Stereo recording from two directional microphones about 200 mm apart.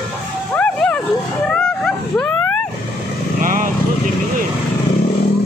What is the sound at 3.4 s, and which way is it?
Vehicle, 40° right (ahead or behind).